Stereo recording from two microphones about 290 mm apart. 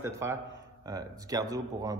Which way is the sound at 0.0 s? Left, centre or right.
Centre.